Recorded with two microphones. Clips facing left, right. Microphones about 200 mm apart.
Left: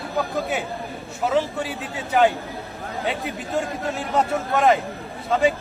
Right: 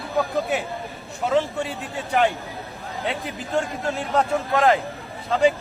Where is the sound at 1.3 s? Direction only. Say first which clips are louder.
Right 1 dB; centre (ahead or behind).